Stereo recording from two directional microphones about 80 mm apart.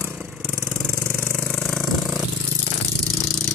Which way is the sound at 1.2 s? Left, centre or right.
Centre.